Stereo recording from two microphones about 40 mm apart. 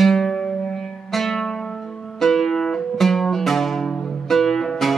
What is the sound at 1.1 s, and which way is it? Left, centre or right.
Music, centre.